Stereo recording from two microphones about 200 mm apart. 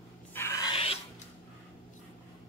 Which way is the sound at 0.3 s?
15° left (ahead or behind).